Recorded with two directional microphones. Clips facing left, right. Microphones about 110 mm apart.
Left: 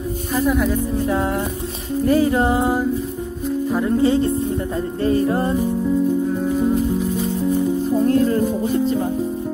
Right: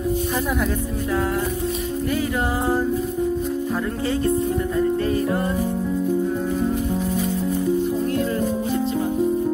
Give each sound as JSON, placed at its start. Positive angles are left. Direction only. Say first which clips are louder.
{"t": 2.0, "sound": "music", "louder": "left 9 dB", "side_deg": 35}
{"t": 2.6, "sound": "music", "louder": "left 2 dB", "side_deg": 15}
{"t": 4.0, "sound": "speech", "louder": "left 7 dB", "side_deg": 25}
{"t": 5.0, "sound": "music", "louder": "left 4 dB", "side_deg": 30}
{"t": 8.1, "sound": "music", "louder": "left 6 dB", "side_deg": 40}